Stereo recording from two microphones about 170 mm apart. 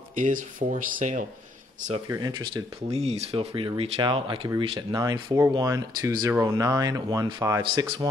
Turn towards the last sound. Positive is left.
turn(degrees=-20)  # may be behind; listen again after turning